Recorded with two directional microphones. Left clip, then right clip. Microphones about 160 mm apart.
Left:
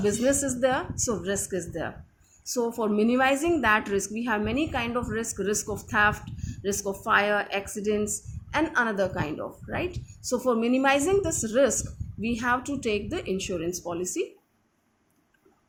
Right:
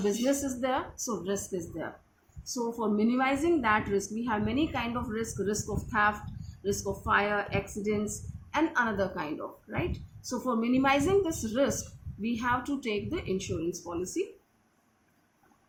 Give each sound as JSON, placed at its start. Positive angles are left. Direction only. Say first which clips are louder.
{"t": 0.0, "sound": "a woman's voice", "louder": "left 4 dB", "side_deg": 45}